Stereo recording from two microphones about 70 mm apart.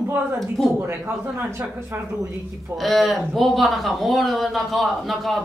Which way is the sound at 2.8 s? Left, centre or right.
Centre.